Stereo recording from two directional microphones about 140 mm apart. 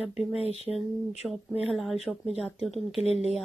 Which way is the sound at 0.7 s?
Centre (ahead or behind).